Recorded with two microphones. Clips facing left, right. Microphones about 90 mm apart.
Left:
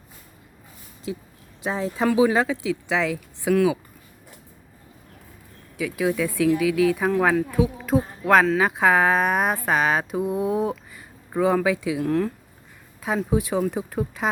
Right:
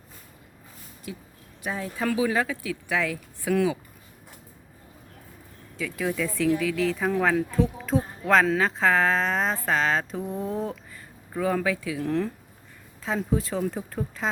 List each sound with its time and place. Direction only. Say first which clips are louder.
1.1 s speech: left 7 dB; 25° left (ahead or behind)
3.5 s speech: left 4 dB; 5° left (ahead or behind)
5.7 s speech: left 5 dB; 10° left (ahead or behind)
12.0 s speech: left 3 dB; 5° left (ahead or behind)
13.3 s speech: left 5 dB; 10° left (ahead or behind)